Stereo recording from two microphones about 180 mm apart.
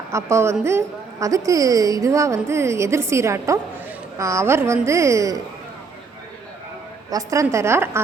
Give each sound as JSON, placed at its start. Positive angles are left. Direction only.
{"t": 0.1, "sound": "a woman's voice", "side_deg": -15}
{"t": 7.1, "sound": "a woman's voice", "side_deg": -20}